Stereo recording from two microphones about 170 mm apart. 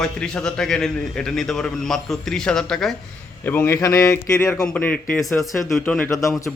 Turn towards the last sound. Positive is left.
turn(degrees=20)  # may be behind; listen again after turning